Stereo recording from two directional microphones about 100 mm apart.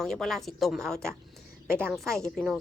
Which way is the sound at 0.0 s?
5° left (ahead or behind).